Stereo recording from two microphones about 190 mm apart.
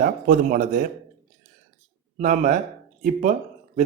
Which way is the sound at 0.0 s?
45° right (ahead or behind).